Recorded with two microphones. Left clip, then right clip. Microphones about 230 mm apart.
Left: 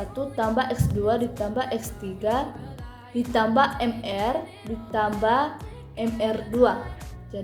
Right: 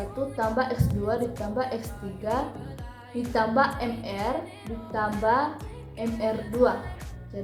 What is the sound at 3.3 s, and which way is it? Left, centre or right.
A woman's voice, left.